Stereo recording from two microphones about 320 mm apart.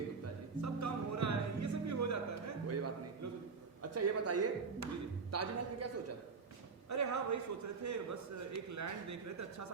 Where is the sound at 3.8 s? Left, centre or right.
Right.